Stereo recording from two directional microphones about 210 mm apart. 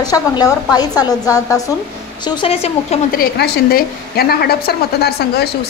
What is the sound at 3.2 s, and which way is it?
A woman's voice, 45° left (ahead or behind).